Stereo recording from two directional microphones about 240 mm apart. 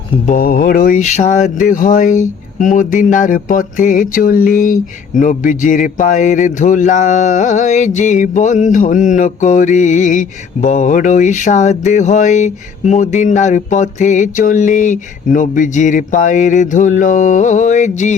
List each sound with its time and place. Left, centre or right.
0.3 s speech: left